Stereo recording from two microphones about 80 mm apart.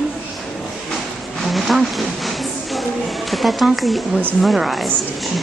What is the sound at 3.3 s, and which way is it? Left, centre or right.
Speech, centre.